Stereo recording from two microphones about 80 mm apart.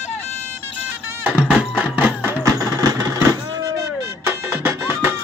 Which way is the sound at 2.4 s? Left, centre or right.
Right.